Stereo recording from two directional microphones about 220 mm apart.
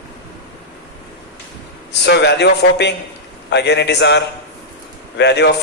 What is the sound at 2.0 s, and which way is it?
A man's voice, 50° left (ahead or behind).